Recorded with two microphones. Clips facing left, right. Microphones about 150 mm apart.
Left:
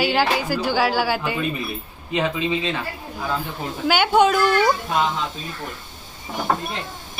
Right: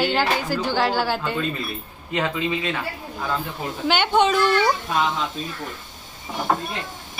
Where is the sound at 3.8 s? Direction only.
5° left (ahead or behind).